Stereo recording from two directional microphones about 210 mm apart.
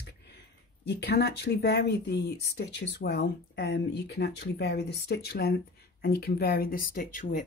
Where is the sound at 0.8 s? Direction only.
50° left (ahead or behind).